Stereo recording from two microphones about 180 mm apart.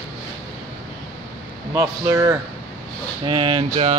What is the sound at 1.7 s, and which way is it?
Speech, 15° right (ahead or behind).